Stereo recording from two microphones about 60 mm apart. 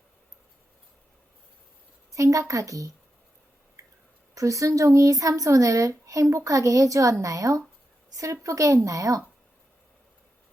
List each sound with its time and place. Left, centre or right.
2.1 s a woman's voice: right
4.4 s a woman's voice: right